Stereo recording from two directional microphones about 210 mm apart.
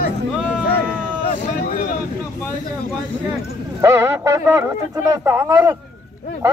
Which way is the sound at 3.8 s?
15° right (ahead or behind).